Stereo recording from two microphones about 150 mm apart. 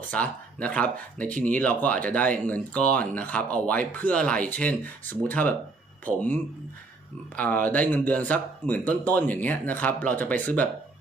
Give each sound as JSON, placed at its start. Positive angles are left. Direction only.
{"t": 0.1, "sound": "speech", "side_deg": 10}